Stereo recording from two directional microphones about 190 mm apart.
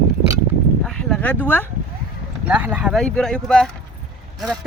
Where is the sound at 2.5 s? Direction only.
10° right (ahead or behind).